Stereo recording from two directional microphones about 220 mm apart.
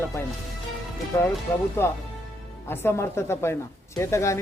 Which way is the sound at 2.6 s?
10° left (ahead or behind).